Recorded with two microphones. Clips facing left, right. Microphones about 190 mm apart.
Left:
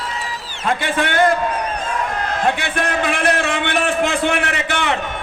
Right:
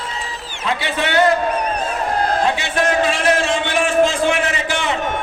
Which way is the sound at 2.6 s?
55° left (ahead or behind).